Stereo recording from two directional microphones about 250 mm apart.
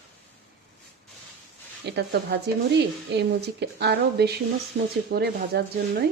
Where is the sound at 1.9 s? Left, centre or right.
Right.